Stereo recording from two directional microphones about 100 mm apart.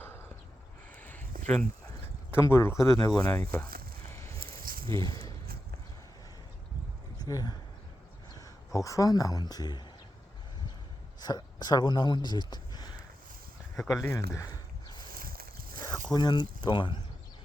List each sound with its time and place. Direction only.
0.9 s a sound: 15° left (ahead or behind)
2.3 s speech: 25° left (ahead or behind)
3.2 s speech: 20° left (ahead or behind)
4.1 s a sound: 30° left (ahead or behind)
4.4 s snake: 60° right (ahead or behind)
5.0 s speech: 40° left (ahead or behind)
7.2 s speech: 40° left (ahead or behind)
11.2 s speech: 45° left (ahead or behind)
13.7 s speech: centre (ahead or behind)
14.0 s speech: 30° left (ahead or behind)
16.1 s speech: 45° left (ahead or behind)